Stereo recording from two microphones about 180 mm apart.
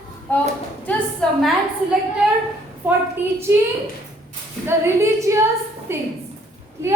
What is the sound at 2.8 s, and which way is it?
Female singing, 10° right (ahead or behind).